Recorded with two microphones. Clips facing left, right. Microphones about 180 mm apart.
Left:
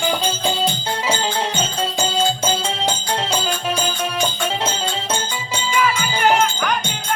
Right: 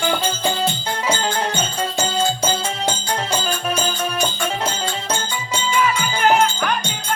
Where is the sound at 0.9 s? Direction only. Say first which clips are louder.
Even; 25° left (ahead or behind); by 6.7 s 10° left (ahead or behind).